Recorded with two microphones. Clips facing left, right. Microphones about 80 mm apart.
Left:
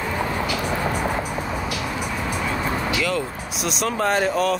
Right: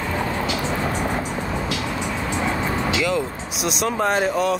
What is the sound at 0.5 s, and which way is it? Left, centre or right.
Music, right.